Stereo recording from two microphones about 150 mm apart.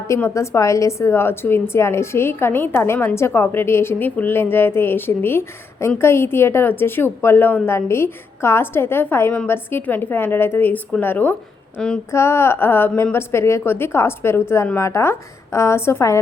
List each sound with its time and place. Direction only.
0.1 s a woman's voice: 20° left (ahead or behind)
11.8 s female singing: 5° left (ahead or behind)
12.1 s a woman's voice: 15° left (ahead or behind)